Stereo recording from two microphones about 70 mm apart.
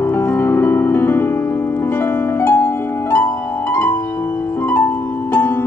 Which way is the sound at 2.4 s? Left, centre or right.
Left.